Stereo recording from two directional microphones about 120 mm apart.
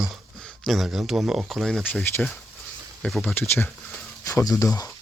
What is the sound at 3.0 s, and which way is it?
Speech, centre (ahead or behind).